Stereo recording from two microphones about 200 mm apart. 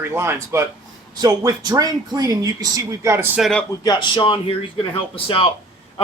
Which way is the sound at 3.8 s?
25° left (ahead or behind).